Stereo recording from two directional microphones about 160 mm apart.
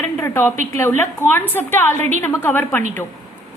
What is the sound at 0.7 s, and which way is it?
A woman's voice, 15° left (ahead or behind).